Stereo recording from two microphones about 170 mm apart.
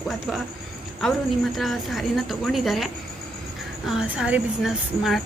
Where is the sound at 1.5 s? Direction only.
Centre (ahead or behind).